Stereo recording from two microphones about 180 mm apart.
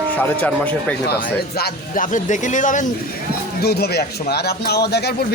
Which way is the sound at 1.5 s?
55° left (ahead or behind).